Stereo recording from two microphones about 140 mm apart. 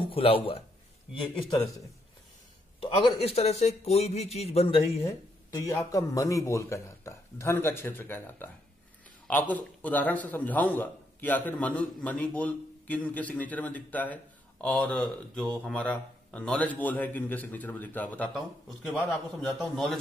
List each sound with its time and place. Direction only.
0.1 s speech: 45° left (ahead or behind)
1.2 s a man's voice: centre (ahead or behind)
3.2 s speech: 45° left (ahead or behind)
5.5 s a man's voice: 20° left (ahead or behind); by 20.0 s centre (ahead or behind)